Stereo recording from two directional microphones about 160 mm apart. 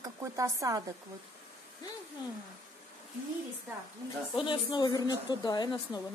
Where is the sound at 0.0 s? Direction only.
20° right (ahead or behind).